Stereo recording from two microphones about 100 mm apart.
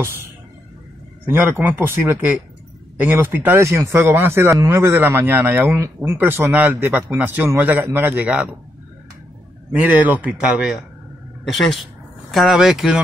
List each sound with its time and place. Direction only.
1.2 s a man's voice: 20° right (ahead or behind)
9.7 s a man's voice: 15° right (ahead or behind)
11.4 s speech: centre (ahead or behind)